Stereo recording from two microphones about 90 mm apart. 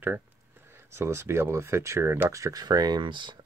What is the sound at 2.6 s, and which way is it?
Speech, 50° right (ahead or behind).